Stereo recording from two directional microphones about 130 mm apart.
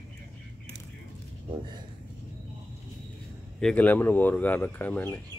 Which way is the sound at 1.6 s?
35° right (ahead or behind).